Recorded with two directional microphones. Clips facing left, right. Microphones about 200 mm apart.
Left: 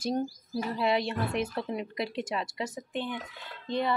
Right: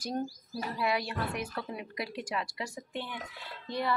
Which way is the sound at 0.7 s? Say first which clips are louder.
Left 3 dB; 25° left (ahead or behind).